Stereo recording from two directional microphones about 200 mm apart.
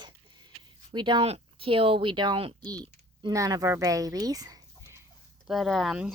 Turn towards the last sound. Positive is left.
turn(degrees=-5)  # may be behind; listen again after turning